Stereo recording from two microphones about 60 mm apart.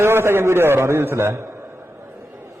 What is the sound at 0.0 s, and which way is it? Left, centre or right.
A man's voice, right.